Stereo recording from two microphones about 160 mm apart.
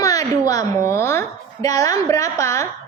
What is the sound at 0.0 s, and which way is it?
A woman's voice, 20° left (ahead or behind).